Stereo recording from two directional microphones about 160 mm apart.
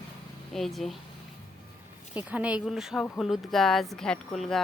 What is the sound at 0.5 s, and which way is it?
Speech, centre (ahead or behind).